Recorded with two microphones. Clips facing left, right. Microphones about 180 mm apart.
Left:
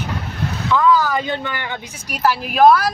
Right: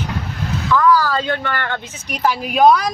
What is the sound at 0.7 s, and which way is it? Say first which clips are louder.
Speech: right 1 dB; 20° left (ahead or behind).